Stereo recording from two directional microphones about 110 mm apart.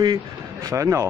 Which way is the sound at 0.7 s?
30° right (ahead or behind).